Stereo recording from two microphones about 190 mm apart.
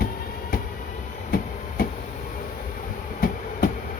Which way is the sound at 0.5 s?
50° left (ahead or behind).